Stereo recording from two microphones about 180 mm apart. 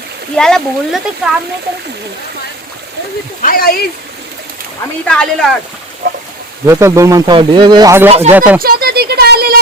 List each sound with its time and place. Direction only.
0.3 s speech: 5° left (ahead or behind)
3.4 s speech: 55° left (ahead or behind)
5.0 s speech: 5° left (ahead or behind)
6.0 s speech: 60° right (ahead or behind)
6.7 s speech: 15° right (ahead or behind)
8.6 s a sound: 60° right (ahead or behind)